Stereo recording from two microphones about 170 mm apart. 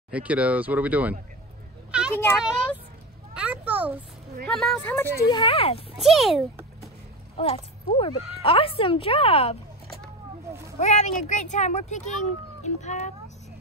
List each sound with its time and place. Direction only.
0.1 s speech: 10° right (ahead or behind)
1.9 s a sound: 5° right (ahead or behind)
2.3 s a woman's voice: 5° right (ahead or behind)
4.5 s a woman's voice: 5° left (ahead or behind)
5.3 s speech: 30° left (ahead or behind)
5.9 s a woman's voice: centre (ahead or behind)
7.3 s speech: 35° left (ahead or behind)
10.8 s speech: 45° left (ahead or behind)